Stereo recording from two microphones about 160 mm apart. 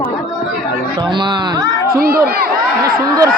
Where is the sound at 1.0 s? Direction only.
30° right (ahead or behind).